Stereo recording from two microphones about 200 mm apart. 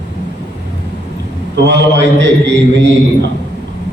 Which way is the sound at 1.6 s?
60° right (ahead or behind).